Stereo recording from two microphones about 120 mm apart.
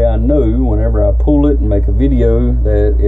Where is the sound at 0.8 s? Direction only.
20° right (ahead or behind).